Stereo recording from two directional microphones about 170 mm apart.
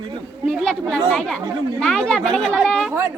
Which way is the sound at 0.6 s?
5° left (ahead or behind).